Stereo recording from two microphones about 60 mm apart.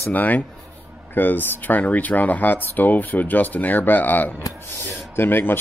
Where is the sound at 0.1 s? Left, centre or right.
Left.